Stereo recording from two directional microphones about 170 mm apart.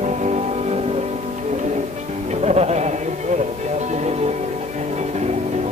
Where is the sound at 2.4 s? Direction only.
40° right (ahead or behind).